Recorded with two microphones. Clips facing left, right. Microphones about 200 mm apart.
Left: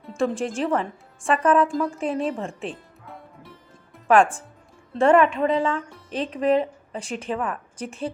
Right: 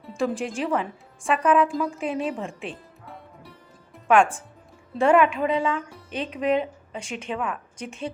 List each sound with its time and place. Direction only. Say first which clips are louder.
0.0 s a woman's voice: left 2 dB; centre (ahead or behind)
4.9 s speech: left 2 dB; centre (ahead or behind)
6.9 s a woman's voice: left 3 dB; 35° left (ahead or behind)
7.3 s speech: even; centre (ahead or behind)
7.8 s a woman's voice: left 5 dB; 30° left (ahead or behind)